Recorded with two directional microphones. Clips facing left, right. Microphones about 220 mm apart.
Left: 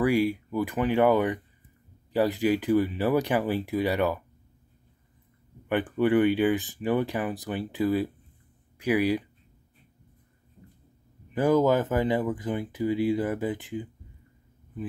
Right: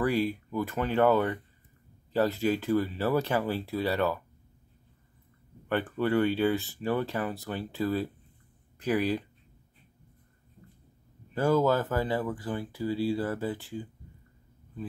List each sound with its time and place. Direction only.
0.0 s speech: 10° left (ahead or behind)
5.7 s speech: 15° left (ahead or behind)
11.3 s speech: 15° left (ahead or behind)